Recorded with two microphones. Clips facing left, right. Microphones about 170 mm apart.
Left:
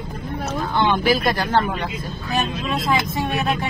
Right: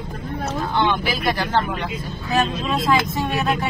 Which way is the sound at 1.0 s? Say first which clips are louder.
Left 3 dB; 45° left (ahead or behind).